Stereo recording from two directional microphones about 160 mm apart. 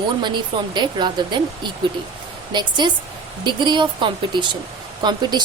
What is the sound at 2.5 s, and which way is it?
Speech, 30° right (ahead or behind).